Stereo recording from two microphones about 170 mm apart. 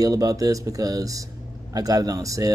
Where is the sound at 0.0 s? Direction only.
20° right (ahead or behind).